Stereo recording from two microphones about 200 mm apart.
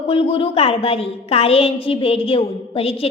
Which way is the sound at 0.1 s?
25° left (ahead or behind).